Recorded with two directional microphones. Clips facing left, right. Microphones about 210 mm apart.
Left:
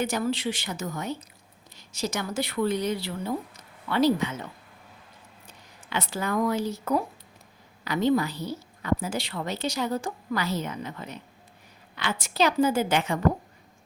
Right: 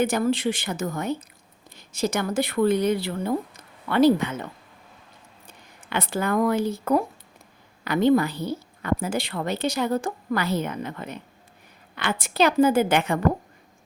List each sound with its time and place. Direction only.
0.0 s a woman's voice: 55° right (ahead or behind)
5.9 s a woman's voice: 55° right (ahead or behind)